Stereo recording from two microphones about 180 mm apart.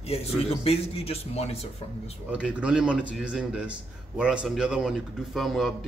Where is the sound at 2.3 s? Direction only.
5° right (ahead or behind).